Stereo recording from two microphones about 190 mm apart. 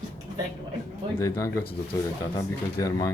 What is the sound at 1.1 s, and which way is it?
Speech, 15° left (ahead or behind).